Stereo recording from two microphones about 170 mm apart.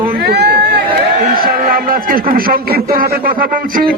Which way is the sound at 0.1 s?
70° right (ahead or behind).